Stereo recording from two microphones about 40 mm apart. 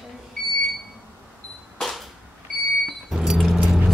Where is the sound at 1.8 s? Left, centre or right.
Centre.